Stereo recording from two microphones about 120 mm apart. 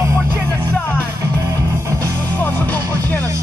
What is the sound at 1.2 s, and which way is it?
Music, 25° right (ahead or behind).